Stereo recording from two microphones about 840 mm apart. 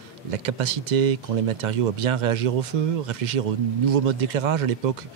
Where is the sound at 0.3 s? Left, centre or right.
Right.